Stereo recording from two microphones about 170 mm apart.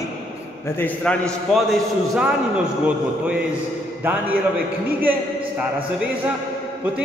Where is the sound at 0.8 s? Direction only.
5° left (ahead or behind).